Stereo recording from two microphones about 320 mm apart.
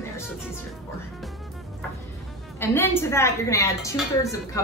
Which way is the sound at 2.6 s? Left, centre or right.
Centre.